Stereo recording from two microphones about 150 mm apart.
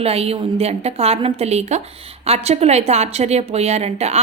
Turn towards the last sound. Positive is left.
turn(degrees=-45)  # may be behind; listen again after turning